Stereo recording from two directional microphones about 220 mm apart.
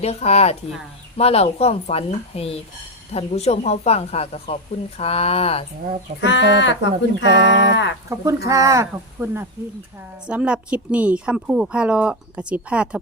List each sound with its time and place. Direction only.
0.0 s speech: 30° left (ahead or behind)
6.1 s speech: 55° left (ahead or behind)
8.1 s a woman's voice: 15° right (ahead or behind)